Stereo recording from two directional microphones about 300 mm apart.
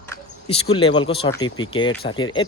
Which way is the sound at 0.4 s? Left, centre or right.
Centre.